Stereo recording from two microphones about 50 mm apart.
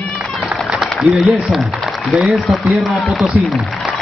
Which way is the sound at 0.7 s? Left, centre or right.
Centre.